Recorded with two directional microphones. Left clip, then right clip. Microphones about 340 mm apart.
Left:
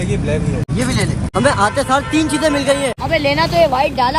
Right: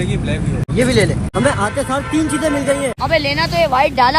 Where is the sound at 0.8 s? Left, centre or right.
Centre.